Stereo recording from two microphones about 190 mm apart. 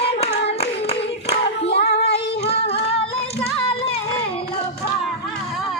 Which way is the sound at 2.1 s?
30° left (ahead or behind).